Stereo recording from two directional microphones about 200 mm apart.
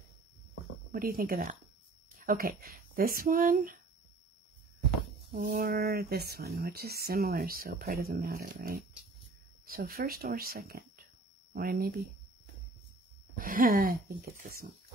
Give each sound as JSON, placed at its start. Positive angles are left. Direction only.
{"t": 0.9, "sound": "speech", "side_deg": -45}
{"t": 5.3, "sound": "speech", "side_deg": -45}
{"t": 13.4, "sound": "speech", "side_deg": -45}